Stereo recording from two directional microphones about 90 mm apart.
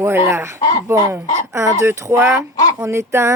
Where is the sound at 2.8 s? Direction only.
30° right (ahead or behind).